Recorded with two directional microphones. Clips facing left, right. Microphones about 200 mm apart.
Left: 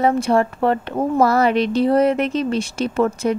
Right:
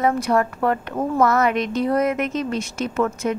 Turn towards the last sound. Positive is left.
turn(degrees=30)  # may be behind; listen again after turning